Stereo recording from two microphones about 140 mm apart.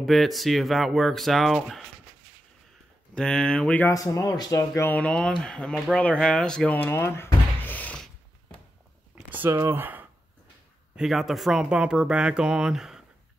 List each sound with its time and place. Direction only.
0.0 s speech: centre (ahead or behind)
3.2 s speech: 5° left (ahead or behind)
3.9 s speech: 25° left (ahead or behind)
4.9 s speech: 10° left (ahead or behind)
9.3 s speech: 15° right (ahead or behind)
11.0 s speech: centre (ahead or behind)